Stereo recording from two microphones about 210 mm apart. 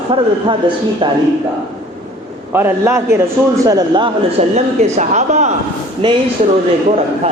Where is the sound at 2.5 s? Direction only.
10° right (ahead or behind); by 5.5 s 35° right (ahead or behind).